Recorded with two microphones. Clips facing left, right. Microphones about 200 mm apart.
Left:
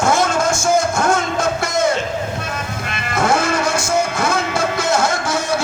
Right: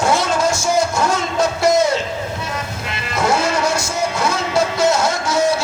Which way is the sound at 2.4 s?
50° left (ahead or behind).